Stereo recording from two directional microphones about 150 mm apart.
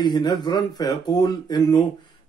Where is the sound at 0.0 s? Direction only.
30° left (ahead or behind).